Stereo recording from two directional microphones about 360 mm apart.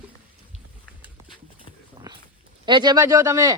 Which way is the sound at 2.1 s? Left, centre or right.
Centre.